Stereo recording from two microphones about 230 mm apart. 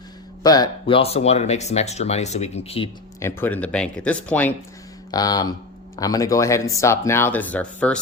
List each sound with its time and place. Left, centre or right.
0.4 s speech: centre
3.2 s speech: centre